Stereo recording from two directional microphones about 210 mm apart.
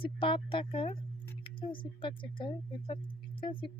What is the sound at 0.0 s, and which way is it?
Speech, 25° left (ahead or behind).